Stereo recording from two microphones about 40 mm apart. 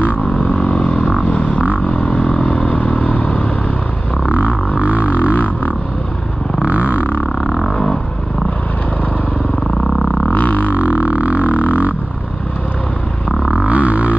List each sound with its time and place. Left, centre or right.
0.0 s vehicle: left
0.6 s vehicle: left
1.3 s a sound: left
1.9 s vehicle: left
4.7 s didgeridoo: right
5.0 s didgeridoo: left
6.6 s a sound: right
7.4 s a sound: centre
9.8 s didgeridoo: centre
10.3 s music: left
10.7 s music: right
11.4 s didgeridoo: left
13.7 s a sound: right